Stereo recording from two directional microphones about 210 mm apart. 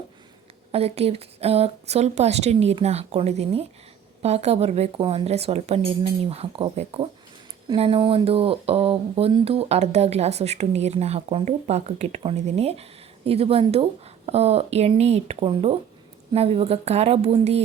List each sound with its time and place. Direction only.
0.7 s speech: 30° right (ahead or behind)